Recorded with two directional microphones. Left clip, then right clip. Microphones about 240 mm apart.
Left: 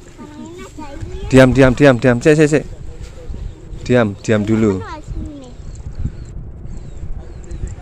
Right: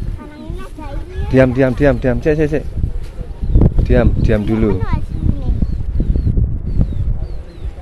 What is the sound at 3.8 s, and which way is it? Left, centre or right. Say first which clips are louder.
Speech: left 3 dB; centre.